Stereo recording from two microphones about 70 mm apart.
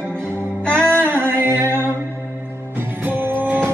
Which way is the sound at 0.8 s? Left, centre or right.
Right.